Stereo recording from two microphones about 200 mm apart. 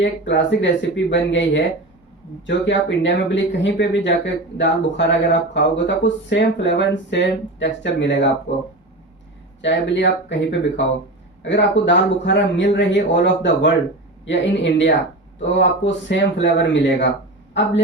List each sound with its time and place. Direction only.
0.0 s speech: 65° left (ahead or behind)
9.6 s speech: 65° left (ahead or behind)